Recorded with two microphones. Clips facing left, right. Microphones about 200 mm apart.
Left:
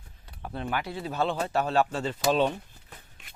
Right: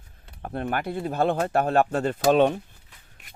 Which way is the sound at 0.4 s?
50° right (ahead or behind).